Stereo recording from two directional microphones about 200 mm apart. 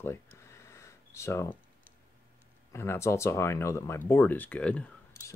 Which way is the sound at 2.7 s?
15° left (ahead or behind).